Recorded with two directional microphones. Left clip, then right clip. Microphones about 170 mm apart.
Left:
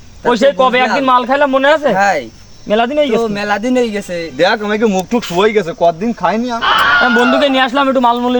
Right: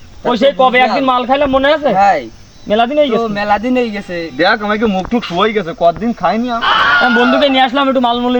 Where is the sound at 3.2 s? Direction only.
30° left (ahead or behind).